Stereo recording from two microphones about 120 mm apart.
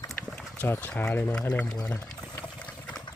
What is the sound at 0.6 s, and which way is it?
Speech, 15° left (ahead or behind).